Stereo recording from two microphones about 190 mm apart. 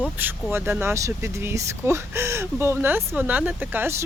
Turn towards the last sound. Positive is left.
turn(degrees=-10)  # may be behind; listen again after turning